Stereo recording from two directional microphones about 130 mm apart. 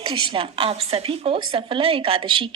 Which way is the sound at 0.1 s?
40° right (ahead or behind).